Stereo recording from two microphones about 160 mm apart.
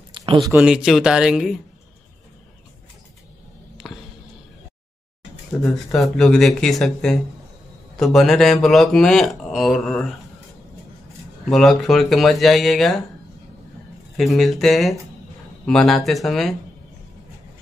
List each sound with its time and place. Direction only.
0.1 s a sound: 30° right (ahead or behind)
0.6 s speech: 5° right (ahead or behind)
3.8 s a sound: centre (ahead or behind)
5.6 s speech: centre (ahead or behind)
11.4 s speech: centre (ahead or behind)
14.1 s speech: centre (ahead or behind)